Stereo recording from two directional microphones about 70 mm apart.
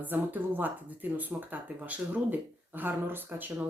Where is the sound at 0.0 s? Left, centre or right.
Right.